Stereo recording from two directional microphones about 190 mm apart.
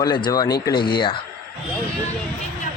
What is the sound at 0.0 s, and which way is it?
Speech, 20° left (ahead or behind).